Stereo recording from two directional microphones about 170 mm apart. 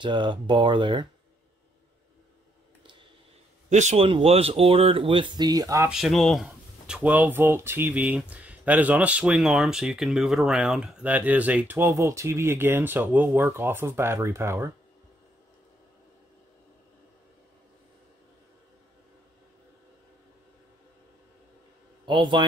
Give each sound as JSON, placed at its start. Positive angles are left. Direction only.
{"t": 0.0, "sound": "speech", "side_deg": -30}
{"t": 2.8, "sound": "a sound", "side_deg": -30}
{"t": 3.7, "sound": "speech", "side_deg": -40}
{"t": 5.9, "sound": "speech", "side_deg": 0}
{"t": 22.0, "sound": "a man's voice", "side_deg": -30}